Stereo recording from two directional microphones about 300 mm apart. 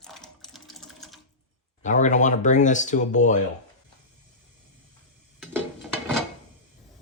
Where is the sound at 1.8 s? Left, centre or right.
Left.